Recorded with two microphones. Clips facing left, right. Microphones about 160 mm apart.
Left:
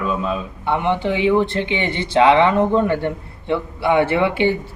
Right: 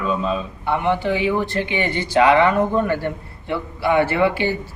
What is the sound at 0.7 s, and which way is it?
Speech, 20° left (ahead or behind).